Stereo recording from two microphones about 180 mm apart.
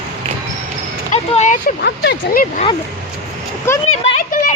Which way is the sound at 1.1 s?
40° left (ahead or behind).